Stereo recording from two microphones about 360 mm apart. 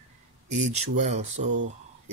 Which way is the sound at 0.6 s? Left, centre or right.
Centre.